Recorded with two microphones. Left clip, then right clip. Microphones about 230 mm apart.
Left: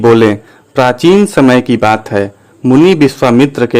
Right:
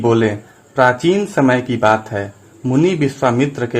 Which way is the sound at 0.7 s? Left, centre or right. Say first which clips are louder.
Left 5 dB; left.